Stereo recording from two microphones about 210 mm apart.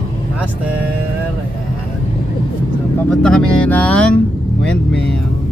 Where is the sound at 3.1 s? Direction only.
5° left (ahead or behind).